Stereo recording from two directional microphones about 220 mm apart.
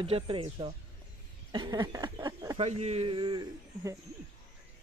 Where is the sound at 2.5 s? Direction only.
30° right (ahead or behind).